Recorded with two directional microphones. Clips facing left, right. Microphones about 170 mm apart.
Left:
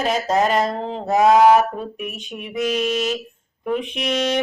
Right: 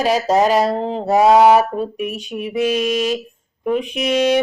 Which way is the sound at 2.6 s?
10° right (ahead or behind).